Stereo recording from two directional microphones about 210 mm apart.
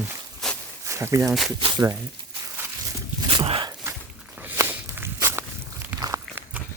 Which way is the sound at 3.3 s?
25° right (ahead or behind).